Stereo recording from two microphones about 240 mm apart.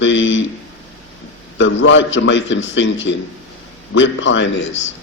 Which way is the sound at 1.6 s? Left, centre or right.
Left.